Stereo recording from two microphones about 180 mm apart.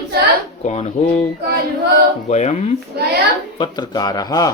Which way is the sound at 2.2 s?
40° left (ahead or behind).